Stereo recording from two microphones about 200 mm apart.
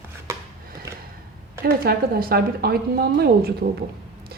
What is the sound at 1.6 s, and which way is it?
A woman's voice, 50° right (ahead or behind).